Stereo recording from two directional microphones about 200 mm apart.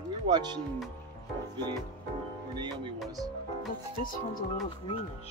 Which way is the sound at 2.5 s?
25° right (ahead or behind).